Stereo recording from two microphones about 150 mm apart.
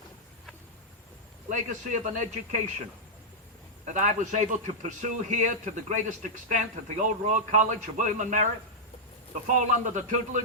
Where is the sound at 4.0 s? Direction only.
55° right (ahead or behind).